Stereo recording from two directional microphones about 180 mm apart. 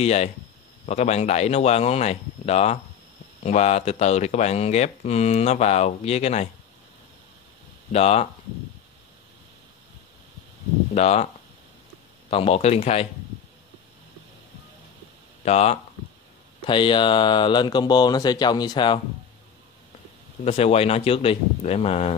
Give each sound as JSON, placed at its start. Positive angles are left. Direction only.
{"t": 0.0, "sound": "speech", "side_deg": 35}
{"t": 7.9, "sound": "speech", "side_deg": 35}
{"t": 11.0, "sound": "speech", "side_deg": 35}
{"t": 12.3, "sound": "speech", "side_deg": 30}
{"t": 15.4, "sound": "speech", "side_deg": 35}
{"t": 20.4, "sound": "speech", "side_deg": 35}